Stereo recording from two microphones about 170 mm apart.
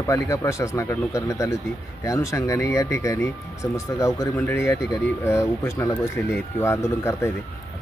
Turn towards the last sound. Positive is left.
turn(degrees=15)  # may be behind; listen again after turning